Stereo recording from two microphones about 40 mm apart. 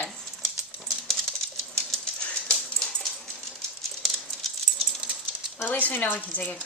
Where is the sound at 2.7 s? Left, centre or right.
Centre.